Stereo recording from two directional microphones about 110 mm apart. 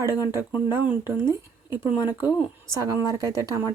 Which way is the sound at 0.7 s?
20° right (ahead or behind).